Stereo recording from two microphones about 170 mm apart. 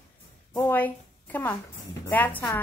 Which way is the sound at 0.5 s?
10° left (ahead or behind).